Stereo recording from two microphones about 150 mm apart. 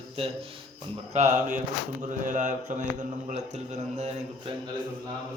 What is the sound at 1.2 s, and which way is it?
Speech, 50° right (ahead or behind).